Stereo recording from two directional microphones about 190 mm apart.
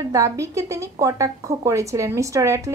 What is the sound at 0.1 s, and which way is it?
A woman's voice, 15° right (ahead or behind).